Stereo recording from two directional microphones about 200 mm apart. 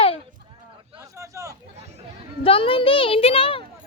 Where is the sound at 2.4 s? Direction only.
25° left (ahead or behind).